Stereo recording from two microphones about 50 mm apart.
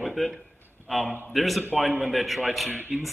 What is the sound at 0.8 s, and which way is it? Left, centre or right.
A man's voice, centre.